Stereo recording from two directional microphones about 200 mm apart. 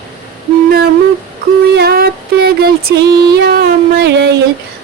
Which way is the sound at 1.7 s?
50° right (ahead or behind).